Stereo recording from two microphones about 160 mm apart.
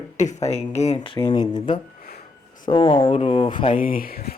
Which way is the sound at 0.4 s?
45° left (ahead or behind).